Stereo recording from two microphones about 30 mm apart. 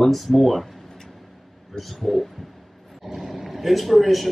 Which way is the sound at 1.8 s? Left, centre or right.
Centre.